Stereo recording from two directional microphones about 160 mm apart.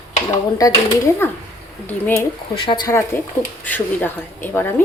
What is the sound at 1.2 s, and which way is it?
Speech, 15° left (ahead or behind).